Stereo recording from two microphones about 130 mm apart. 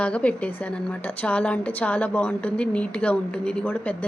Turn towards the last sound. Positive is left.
turn(degrees=10)  # may be behind; listen again after turning